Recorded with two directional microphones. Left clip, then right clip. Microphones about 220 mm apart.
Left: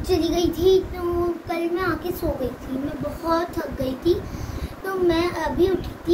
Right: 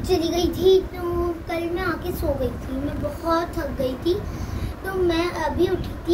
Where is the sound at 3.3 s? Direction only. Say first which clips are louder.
Even; 15° left (ahead or behind).